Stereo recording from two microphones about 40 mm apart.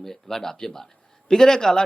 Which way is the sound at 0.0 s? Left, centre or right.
Centre.